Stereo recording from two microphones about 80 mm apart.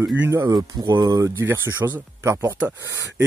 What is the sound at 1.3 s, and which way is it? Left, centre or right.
Speech, right.